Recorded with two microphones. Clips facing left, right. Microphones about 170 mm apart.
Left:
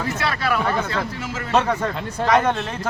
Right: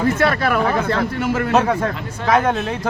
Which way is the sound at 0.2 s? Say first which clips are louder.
Right 5 dB; 50° right (ahead or behind).